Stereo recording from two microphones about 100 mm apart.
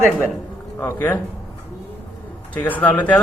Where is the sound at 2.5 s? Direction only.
15° left (ahead or behind).